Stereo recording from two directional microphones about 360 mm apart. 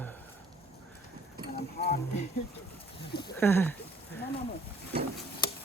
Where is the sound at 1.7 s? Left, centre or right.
Left.